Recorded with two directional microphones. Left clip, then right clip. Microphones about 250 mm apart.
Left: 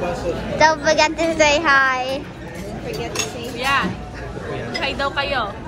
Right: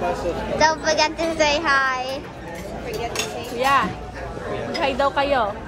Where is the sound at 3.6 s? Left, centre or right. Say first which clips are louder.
Right 1 dB; right.